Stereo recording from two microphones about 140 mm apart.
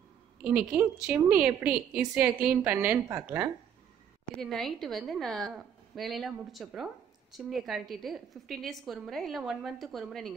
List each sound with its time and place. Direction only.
0.5 s a woman's voice: 10° right (ahead or behind)
4.4 s a woman's voice: centre (ahead or behind)